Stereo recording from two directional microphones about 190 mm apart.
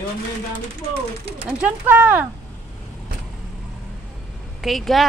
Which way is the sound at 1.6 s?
10° right (ahead or behind).